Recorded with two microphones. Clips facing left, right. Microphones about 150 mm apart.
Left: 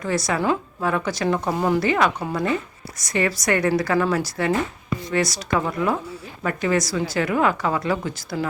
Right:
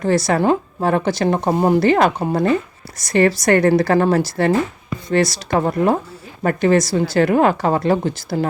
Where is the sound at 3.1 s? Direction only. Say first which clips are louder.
Right 7 dB; 30° right (ahead or behind).